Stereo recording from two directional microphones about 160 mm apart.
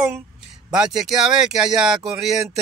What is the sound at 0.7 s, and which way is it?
Speech, 5° right (ahead or behind).